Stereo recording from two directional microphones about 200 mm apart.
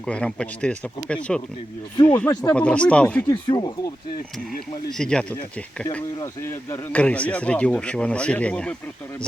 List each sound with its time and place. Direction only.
0.0 s speech: 5° left (ahead or behind)
3.2 s speech: 20° left (ahead or behind)
4.9 s speech: 5° left (ahead or behind)